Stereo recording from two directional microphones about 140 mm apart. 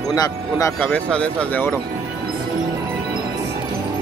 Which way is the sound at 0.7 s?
10° left (ahead or behind).